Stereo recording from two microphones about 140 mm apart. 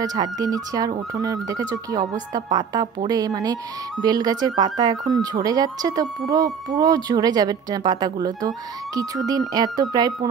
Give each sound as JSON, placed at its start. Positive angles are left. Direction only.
{"t": 0.0, "sound": "speech", "side_deg": -25}